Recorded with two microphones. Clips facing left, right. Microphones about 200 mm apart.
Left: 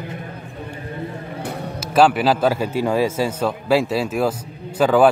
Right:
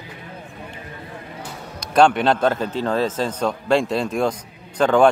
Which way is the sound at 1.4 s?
60° left (ahead or behind).